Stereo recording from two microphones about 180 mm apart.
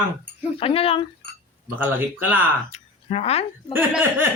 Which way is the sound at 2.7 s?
35° left (ahead or behind).